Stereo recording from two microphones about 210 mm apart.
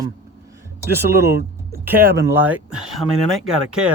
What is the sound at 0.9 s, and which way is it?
Speech, 50° right (ahead or behind).